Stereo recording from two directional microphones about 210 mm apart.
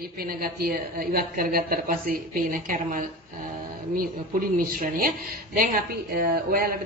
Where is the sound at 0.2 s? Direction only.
45° right (ahead or behind).